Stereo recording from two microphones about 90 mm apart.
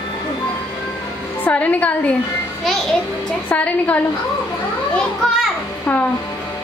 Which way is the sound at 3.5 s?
15° left (ahead or behind).